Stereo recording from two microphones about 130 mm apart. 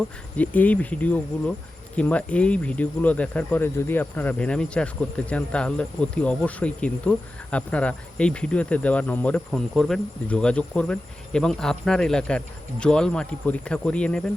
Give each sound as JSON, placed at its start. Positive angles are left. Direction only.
{"t": 0.3, "sound": "speech", "side_deg": 10}